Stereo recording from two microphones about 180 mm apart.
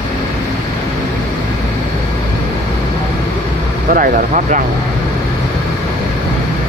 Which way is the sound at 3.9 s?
50° right (ahead or behind).